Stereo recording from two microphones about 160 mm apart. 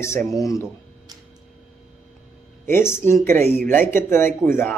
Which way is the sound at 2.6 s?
15° left (ahead or behind).